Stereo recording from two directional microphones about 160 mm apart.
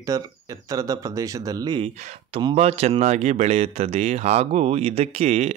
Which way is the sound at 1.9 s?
50° right (ahead or behind).